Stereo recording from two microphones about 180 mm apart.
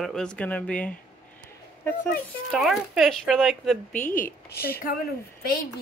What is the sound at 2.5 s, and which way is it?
Speech, centre (ahead or behind).